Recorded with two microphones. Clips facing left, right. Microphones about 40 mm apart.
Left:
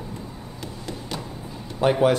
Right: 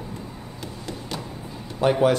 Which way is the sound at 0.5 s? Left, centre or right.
Centre.